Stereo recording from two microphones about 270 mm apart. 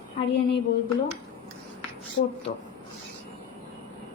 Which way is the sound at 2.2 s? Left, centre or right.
Left.